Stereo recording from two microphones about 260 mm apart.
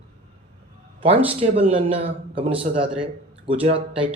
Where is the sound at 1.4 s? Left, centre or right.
Right.